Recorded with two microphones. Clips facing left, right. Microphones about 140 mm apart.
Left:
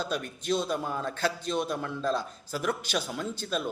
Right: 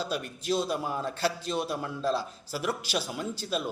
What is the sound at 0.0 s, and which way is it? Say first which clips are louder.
A man's voice: even; 5° right (ahead or behind).